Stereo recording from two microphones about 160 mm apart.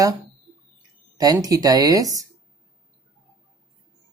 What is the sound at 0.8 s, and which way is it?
Speech, 25° right (ahead or behind).